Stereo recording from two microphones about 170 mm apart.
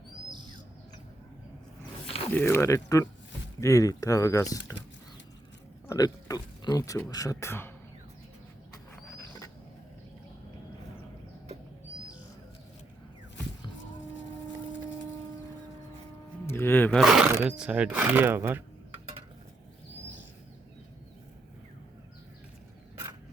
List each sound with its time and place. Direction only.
2.3 s speech: 15° left (ahead or behind)
5.9 s speech: 20° left (ahead or behind)
8.7 s a sound: 15° left (ahead or behind)
16.5 s speech: 15° left (ahead or behind)
17.0 s speech: 5° right (ahead or behind)